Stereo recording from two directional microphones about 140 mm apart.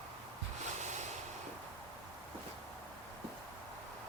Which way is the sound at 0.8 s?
55° right (ahead or behind).